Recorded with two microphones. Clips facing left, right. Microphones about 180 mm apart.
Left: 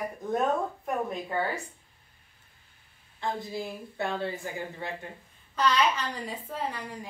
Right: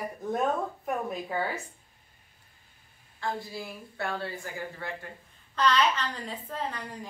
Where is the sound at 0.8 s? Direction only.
5° right (ahead or behind).